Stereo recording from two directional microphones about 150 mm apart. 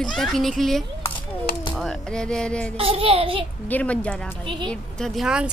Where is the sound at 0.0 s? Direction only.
Centre (ahead or behind).